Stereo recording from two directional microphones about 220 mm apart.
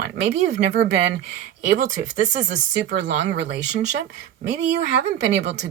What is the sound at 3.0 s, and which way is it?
Speech, 55° right (ahead or behind).